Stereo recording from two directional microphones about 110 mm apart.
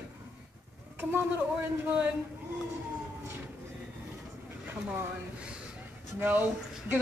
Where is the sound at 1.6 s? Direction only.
15° right (ahead or behind).